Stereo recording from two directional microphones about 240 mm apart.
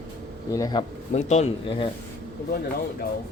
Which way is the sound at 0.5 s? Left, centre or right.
Centre.